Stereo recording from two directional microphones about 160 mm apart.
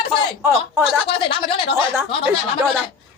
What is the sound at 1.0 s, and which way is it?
Speech, 35° left (ahead or behind).